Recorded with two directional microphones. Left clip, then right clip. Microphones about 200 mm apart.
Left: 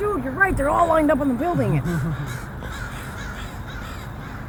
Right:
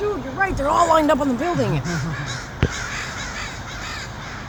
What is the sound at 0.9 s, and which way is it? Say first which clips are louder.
Speech: right 2 dB; 30° right (ahead or behind).